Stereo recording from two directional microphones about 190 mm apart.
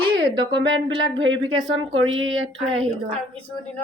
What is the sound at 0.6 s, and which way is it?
Speech, 75° right (ahead or behind).